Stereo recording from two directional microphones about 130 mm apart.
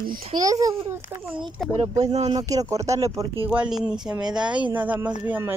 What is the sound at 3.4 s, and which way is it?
Speech, 5° right (ahead or behind).